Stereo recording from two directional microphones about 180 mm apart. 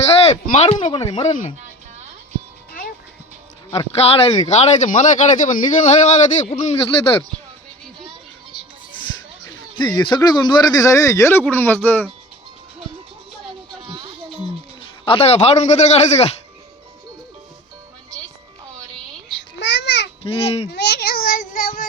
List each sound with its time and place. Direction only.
0.3 s a man's voice: 35° left (ahead or behind)
3.7 s a man's voice: 35° left (ahead or behind)
9.7 s speech: 25° left (ahead or behind)
13.8 s music: 30° right (ahead or behind)
15.0 s a man's voice: 30° left (ahead or behind)
19.4 s babbling: 75° left (ahead or behind)
20.2 s a man's voice: 35° left (ahead or behind)
20.7 s speech: 65° left (ahead or behind)